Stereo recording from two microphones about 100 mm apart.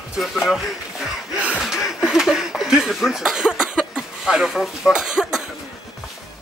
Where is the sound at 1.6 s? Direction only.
Centre (ahead or behind).